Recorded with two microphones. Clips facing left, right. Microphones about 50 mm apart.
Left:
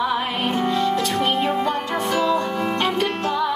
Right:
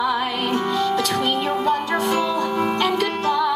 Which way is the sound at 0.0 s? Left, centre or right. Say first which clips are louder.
Even; left.